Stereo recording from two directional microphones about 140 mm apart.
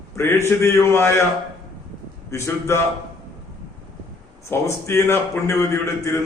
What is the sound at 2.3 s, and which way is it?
Speech, 20° left (ahead or behind).